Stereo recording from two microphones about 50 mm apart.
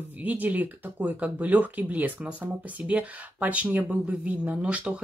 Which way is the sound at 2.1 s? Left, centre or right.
Right.